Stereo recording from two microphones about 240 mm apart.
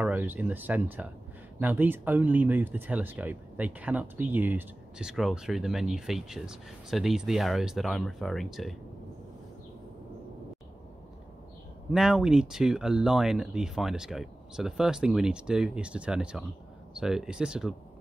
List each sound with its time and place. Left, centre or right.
0.0 s speech: centre
11.9 s speech: centre